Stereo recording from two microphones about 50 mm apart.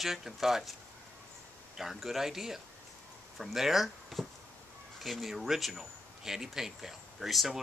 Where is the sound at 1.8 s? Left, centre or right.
Centre.